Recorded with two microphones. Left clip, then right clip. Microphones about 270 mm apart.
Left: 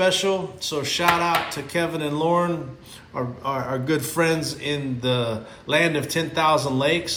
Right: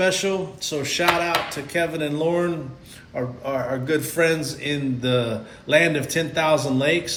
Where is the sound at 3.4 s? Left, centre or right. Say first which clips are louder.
Even; centre.